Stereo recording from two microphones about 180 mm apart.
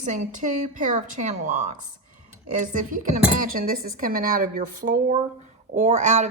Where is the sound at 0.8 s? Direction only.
45° right (ahead or behind).